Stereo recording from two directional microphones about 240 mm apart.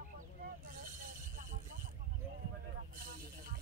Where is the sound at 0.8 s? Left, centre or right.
Right.